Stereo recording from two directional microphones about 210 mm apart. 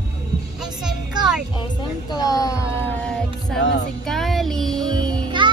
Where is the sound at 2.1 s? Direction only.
15° left (ahead or behind).